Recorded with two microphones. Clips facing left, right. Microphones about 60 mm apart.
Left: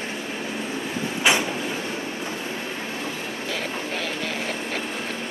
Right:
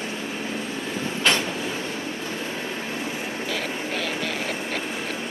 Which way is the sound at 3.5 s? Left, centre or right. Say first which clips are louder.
Even; centre.